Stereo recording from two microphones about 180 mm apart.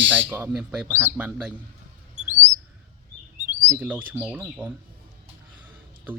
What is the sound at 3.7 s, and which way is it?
Speech, 10° right (ahead or behind).